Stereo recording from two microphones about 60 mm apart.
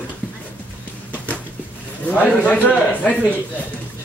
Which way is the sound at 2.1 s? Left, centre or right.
Left.